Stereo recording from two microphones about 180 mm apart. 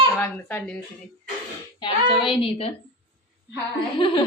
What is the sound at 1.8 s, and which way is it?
Speech, 25° left (ahead or behind).